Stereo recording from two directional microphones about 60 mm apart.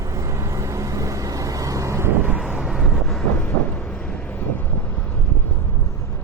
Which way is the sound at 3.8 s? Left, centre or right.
Centre.